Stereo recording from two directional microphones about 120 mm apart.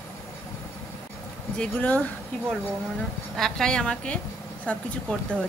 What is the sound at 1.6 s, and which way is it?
Speech, 10° left (ahead or behind).